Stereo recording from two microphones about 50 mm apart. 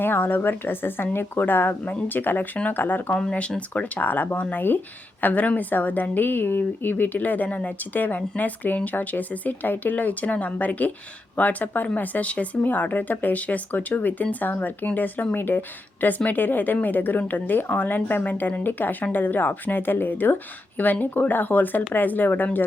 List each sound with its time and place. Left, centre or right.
0.0 s a woman's voice: left
3.1 s speech: centre
3.9 s a woman's voice: left